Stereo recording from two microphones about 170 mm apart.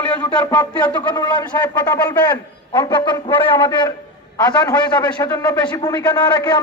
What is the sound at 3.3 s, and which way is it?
Speech, 10° left (ahead or behind).